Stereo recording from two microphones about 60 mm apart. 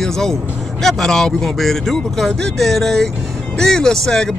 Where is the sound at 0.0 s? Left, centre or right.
Centre.